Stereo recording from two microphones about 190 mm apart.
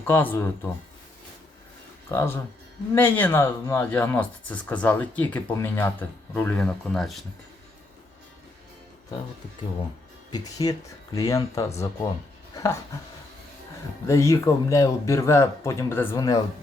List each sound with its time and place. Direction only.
0.0 s speech: 10° left (ahead or behind)
2.0 s speech: 15° left (ahead or behind)
10.3 s speech: 20° left (ahead or behind)
14.1 s speech: 15° left (ahead or behind)